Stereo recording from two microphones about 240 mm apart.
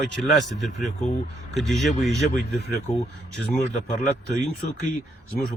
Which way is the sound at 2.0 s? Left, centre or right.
Left.